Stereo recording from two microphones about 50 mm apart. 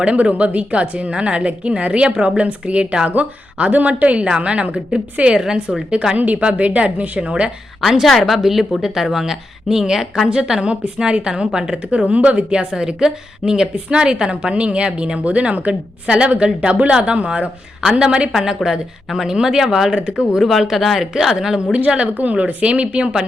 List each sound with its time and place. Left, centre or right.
0.0 s a woman's voice: right
6.1 s a woman's voice: right
7.8 s a woman's voice: centre
20.4 s speech: centre
21.1 s a woman's voice: centre